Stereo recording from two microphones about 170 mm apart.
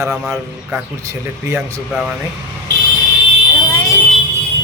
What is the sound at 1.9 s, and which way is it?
Speech, 5° right (ahead or behind).